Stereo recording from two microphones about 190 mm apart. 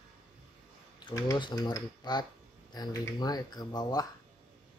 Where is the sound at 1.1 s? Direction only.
20° left (ahead or behind).